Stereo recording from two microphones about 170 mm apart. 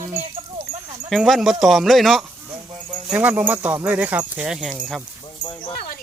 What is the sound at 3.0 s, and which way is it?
Speech, 10° right (ahead or behind).